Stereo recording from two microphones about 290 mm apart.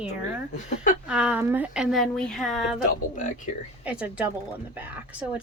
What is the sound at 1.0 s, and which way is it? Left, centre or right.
Speech, centre.